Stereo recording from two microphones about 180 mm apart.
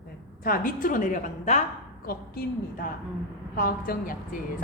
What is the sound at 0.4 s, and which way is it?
A woman's voice, 50° left (ahead or behind).